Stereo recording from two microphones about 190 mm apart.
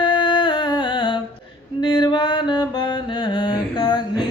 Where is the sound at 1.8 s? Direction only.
25° left (ahead or behind).